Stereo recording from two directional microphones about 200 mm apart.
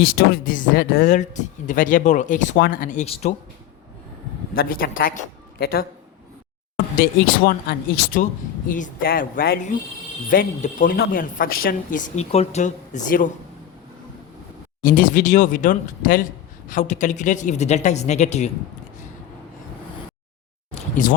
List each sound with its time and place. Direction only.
0.1 s speech: 45° left (ahead or behind)
4.5 s speech: 45° left (ahead or behind)
6.9 s speech: 50° left (ahead or behind)
14.8 s speech: 45° left (ahead or behind)
20.7 s a sound: 40° left (ahead or behind)